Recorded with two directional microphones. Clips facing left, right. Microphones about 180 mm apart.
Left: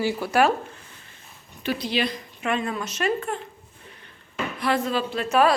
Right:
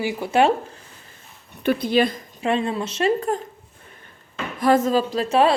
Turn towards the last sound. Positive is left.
turn(degrees=-30)  # may be behind; listen again after turning